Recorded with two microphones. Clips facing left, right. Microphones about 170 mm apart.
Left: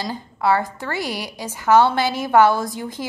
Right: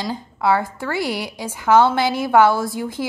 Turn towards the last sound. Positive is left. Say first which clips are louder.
# right 3 dB
turn(degrees=-10)  # may be behind; listen again after turning